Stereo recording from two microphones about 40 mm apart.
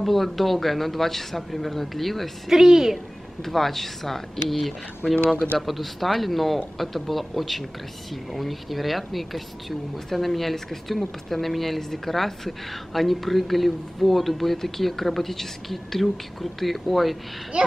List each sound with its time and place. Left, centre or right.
0.0 s speech: centre
2.5 s a woman's voice: centre
3.4 s speech: centre
17.5 s speech: right